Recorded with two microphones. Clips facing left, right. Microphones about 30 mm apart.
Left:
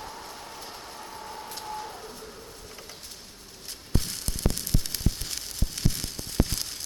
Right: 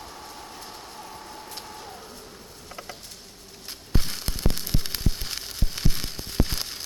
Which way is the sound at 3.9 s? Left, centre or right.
Right.